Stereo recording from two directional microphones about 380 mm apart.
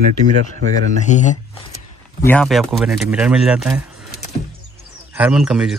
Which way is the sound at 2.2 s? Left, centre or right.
Centre.